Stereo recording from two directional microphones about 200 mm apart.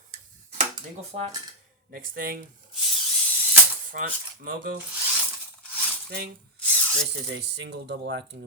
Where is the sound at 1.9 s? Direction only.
45° right (ahead or behind).